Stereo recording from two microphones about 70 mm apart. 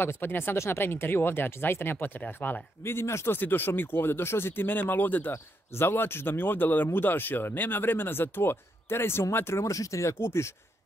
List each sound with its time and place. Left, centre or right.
0.0 s speech: left
2.8 s speech: left